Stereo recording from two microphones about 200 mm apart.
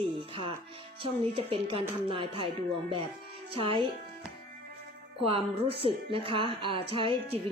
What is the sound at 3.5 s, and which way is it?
Speech, 25° right (ahead or behind).